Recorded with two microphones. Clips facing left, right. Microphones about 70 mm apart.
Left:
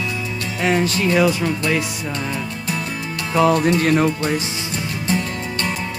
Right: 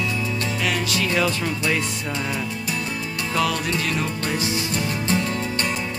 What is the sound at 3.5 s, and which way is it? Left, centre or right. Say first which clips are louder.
Music: left 9 dB; left.